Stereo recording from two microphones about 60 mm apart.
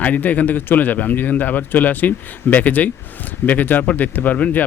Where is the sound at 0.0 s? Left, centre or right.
Left.